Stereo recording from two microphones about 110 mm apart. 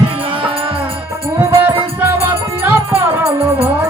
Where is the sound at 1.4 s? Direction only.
20° right (ahead or behind).